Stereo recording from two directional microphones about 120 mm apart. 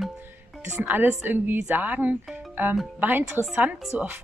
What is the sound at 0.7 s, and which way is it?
Speech, 15° right (ahead or behind).